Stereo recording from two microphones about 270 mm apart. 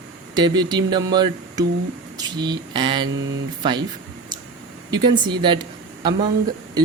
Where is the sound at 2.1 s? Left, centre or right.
Centre.